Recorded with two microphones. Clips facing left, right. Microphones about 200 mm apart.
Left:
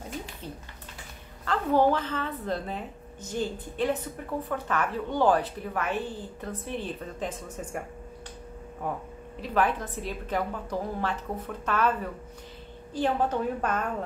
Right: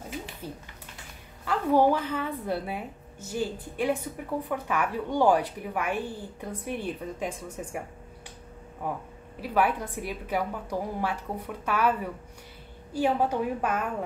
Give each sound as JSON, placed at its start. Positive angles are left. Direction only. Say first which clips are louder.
{"t": 1.4, "sound": "a woman's voice", "louder": "right 1 dB", "side_deg": -10}
{"t": 9.4, "sound": "a woman's voice", "louder": "right 1 dB", "side_deg": -10}